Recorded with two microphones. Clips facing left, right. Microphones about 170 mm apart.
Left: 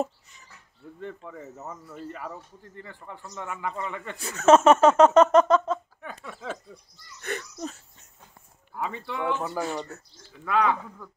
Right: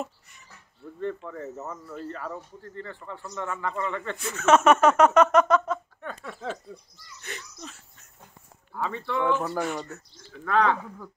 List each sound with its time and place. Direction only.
1.7 s a man's voice: 15° left (ahead or behind)
4.2 s speech: 35° left (ahead or behind)
5.9 s a sound: 10° left (ahead or behind)
7.2 s a sound: 55° left (ahead or behind)
8.7 s a man's voice: 15° left (ahead or behind)
9.4 s speech: centre (ahead or behind)
9.9 s speech: 30° left (ahead or behind)
10.5 s a man's voice: 10° left (ahead or behind)